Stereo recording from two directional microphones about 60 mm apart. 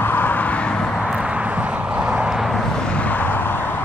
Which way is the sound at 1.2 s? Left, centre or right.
Centre.